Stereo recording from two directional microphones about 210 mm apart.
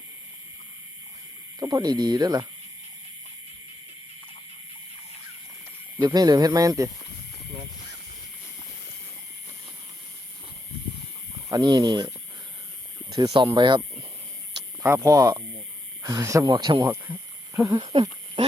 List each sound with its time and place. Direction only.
1.5 s speech: 15° right (ahead or behind)
6.0 s speech: 20° right (ahead or behind)
11.4 s speech: 20° right (ahead or behind)
13.1 s speech: 20° right (ahead or behind)
14.8 s speech: 15° right (ahead or behind)
16.9 s speech: 10° right (ahead or behind)